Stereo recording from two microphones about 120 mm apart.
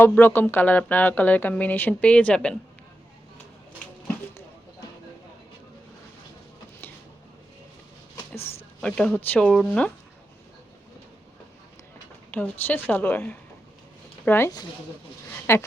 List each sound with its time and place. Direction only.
0.0 s speech: 15° left (ahead or behind)
8.8 s speech: 10° left (ahead or behind)
12.3 s speech: 15° left (ahead or behind)